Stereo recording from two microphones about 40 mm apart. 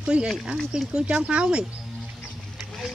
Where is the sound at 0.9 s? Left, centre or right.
Right.